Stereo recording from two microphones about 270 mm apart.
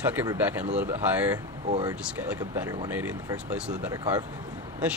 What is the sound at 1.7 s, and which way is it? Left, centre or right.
Speech, centre.